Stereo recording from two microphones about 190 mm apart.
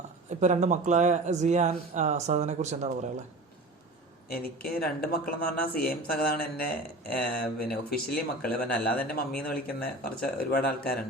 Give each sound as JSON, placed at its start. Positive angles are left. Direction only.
{"t": 0.3, "sound": "speech", "side_deg": -40}
{"t": 4.3, "sound": "speech", "side_deg": 50}